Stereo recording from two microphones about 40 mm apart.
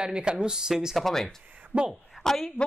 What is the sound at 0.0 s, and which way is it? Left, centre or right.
Speech, right.